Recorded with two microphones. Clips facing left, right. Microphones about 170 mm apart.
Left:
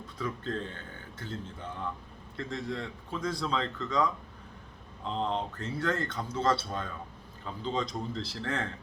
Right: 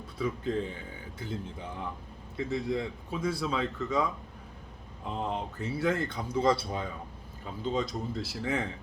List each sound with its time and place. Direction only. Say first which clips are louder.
0.2 s speech: right 4 dB; 10° right (ahead or behind)